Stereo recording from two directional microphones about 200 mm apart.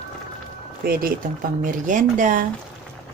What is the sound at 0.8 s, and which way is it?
Speech, 50° right (ahead or behind).